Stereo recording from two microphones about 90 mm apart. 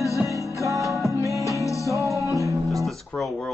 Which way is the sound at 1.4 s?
35° left (ahead or behind).